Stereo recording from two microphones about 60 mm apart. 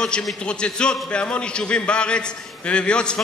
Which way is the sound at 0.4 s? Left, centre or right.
Centre.